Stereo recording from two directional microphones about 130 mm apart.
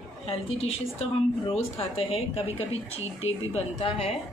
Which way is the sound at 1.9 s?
50° left (ahead or behind).